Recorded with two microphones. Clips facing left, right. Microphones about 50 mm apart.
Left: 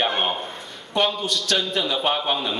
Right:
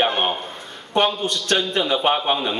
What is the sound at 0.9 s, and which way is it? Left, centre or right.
Speech, right.